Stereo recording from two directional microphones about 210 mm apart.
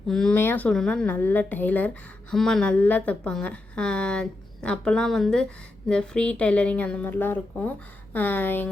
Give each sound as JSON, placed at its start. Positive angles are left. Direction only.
{"t": 0.1, "sound": "a woman's voice", "side_deg": 5}